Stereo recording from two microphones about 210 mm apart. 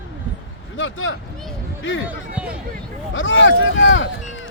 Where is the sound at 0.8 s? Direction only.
65° left (ahead or behind).